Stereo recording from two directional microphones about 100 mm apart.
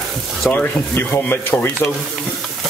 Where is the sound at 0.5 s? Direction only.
20° left (ahead or behind).